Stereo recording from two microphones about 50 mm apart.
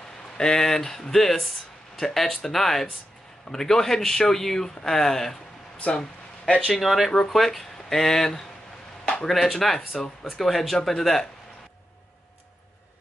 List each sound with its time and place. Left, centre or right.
0.4 s speech: centre
5.8 s speech: left
6.7 s speech: centre
9.0 s a sound: centre
9.3 s speech: centre